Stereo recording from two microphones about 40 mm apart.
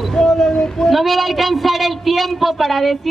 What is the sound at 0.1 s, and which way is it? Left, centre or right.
Child singing, centre.